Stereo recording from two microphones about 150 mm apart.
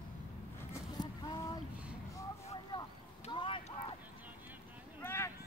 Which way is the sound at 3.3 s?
35° left (ahead or behind).